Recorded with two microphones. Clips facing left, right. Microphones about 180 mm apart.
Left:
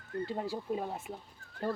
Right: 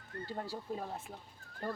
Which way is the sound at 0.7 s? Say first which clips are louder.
Left 4 dB; 10° left (ahead or behind).